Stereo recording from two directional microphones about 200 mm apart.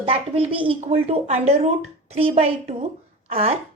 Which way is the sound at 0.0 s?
30° right (ahead or behind).